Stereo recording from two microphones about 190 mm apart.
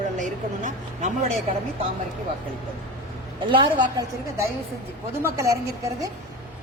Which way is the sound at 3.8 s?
20° right (ahead or behind).